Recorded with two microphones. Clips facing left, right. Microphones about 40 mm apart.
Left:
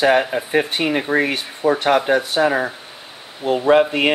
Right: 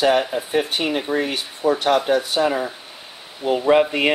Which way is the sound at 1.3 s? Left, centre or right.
Centre.